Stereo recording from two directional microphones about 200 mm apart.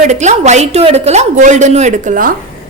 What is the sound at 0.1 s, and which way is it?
A woman's voice, 35° right (ahead or behind).